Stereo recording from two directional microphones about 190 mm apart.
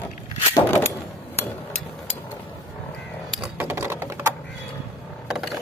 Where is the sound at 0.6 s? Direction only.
15° left (ahead or behind).